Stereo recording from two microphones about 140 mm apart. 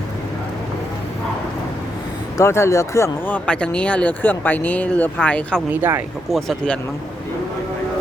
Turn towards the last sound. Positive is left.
turn(degrees=5)  # may be behind; listen again after turning